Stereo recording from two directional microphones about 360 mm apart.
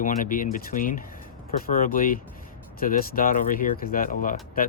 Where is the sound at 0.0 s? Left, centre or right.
Left.